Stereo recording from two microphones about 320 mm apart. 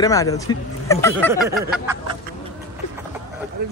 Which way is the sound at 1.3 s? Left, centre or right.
Centre.